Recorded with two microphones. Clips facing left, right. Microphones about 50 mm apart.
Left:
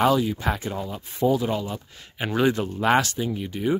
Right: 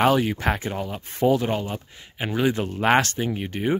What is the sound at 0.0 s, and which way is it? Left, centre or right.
Speech, right.